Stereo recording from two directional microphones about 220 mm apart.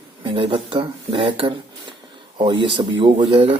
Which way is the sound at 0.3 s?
25° right (ahead or behind).